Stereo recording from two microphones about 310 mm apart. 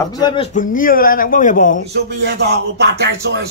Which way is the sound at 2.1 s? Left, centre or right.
Right.